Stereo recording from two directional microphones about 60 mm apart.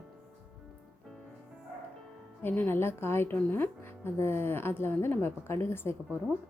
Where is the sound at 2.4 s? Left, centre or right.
Left.